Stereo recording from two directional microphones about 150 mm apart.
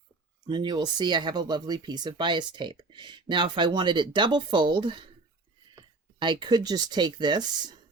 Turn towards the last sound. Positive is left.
turn(degrees=-30)  # may be behind; listen again after turning